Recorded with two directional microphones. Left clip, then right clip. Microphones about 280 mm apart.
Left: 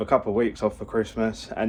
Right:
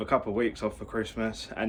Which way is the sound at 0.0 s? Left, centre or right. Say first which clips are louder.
Left 5 dB; centre.